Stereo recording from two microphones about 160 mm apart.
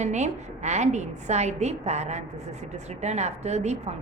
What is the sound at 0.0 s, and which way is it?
A woman's voice, 45° right (ahead or behind).